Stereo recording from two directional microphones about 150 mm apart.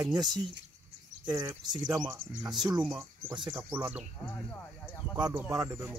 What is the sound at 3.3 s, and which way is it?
Speech, 30° right (ahead or behind).